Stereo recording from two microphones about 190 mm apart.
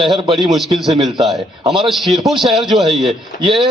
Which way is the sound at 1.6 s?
25° right (ahead or behind).